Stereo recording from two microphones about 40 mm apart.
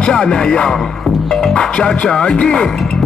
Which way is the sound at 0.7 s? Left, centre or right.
Centre.